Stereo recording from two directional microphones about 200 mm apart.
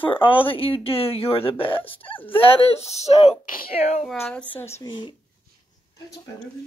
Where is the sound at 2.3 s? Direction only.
30° left (ahead or behind).